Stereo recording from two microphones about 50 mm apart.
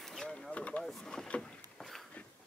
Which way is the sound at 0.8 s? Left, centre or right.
Centre.